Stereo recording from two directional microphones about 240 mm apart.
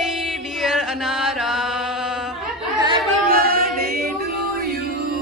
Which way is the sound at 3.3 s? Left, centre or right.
Right.